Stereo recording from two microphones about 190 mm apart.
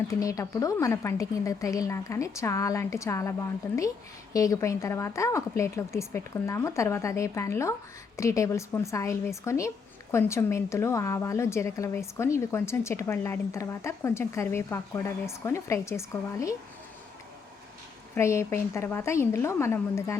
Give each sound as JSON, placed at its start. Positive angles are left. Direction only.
{"t": 0.1, "sound": "a woman's voice", "side_deg": 15}
{"t": 18.1, "sound": "a woman's voice", "side_deg": 15}